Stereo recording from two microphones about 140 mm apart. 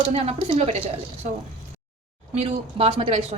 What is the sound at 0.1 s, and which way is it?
Speech, 45° right (ahead or behind).